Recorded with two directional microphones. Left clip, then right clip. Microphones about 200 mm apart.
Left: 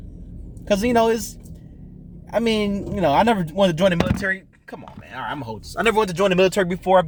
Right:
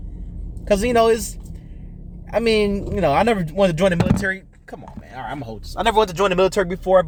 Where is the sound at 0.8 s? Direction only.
10° left (ahead or behind).